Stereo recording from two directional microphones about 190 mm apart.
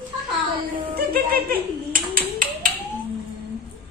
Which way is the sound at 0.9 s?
50° right (ahead or behind).